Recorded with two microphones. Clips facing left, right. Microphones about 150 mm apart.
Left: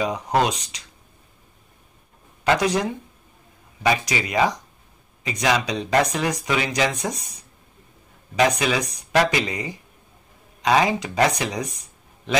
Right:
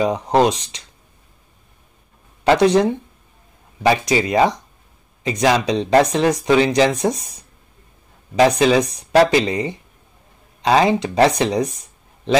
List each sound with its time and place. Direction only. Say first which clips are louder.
0.0 s speech: right 6 dB; 30° right (ahead or behind)
2.4 s speech: right 7 dB; 30° right (ahead or behind)
8.4 s speech: right 7 dB; 30° right (ahead or behind)